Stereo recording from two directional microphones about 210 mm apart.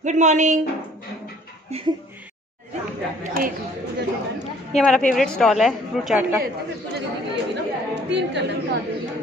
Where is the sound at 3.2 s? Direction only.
40° right (ahead or behind).